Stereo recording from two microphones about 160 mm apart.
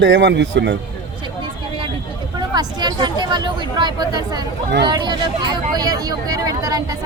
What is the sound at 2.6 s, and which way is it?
Speech, 25° right (ahead or behind).